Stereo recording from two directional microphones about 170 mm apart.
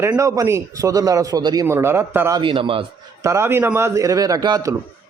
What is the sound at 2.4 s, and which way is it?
Speech, 30° right (ahead or behind).